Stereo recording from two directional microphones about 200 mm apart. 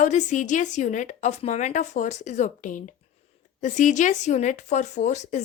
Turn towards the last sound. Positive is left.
turn(degrees=35)  # may be behind; listen again after turning